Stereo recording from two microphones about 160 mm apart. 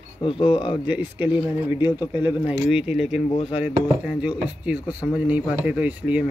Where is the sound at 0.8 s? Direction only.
10° right (ahead or behind).